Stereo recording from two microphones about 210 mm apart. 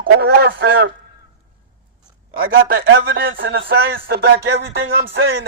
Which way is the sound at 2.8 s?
55° right (ahead or behind).